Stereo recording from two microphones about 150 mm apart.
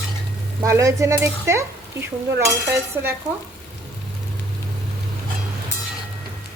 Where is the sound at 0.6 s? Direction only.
20° right (ahead or behind).